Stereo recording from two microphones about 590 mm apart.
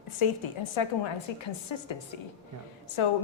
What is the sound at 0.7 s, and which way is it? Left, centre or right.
A woman's voice, left.